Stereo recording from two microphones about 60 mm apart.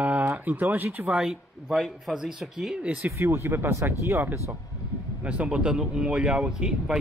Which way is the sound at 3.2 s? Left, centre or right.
Right.